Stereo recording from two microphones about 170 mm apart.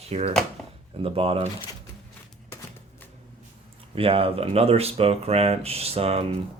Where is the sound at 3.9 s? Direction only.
35° right (ahead or behind).